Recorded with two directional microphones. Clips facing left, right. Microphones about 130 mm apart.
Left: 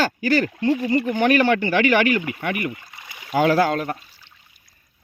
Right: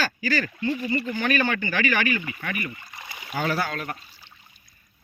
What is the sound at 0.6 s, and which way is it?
Speech, 75° left (ahead or behind).